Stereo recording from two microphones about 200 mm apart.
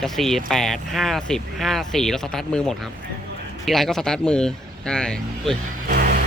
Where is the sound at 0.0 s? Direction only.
Centre (ahead or behind).